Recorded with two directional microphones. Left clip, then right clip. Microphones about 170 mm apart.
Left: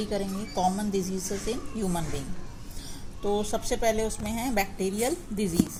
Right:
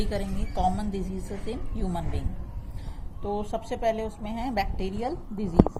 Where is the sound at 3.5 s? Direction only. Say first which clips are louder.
Left 1 dB; 20° left (ahead or behind).